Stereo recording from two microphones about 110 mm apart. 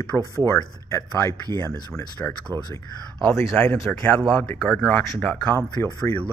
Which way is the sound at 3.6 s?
10° left (ahead or behind).